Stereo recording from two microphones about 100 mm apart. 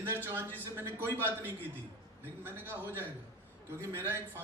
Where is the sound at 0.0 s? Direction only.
25° right (ahead or behind).